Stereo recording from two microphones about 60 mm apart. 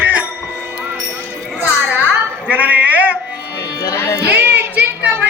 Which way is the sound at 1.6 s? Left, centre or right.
Right.